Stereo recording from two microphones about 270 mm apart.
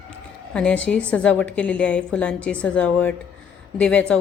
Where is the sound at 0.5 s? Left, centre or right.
Centre.